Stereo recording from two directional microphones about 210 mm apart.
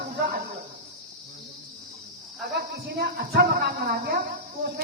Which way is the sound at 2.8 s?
50° right (ahead or behind).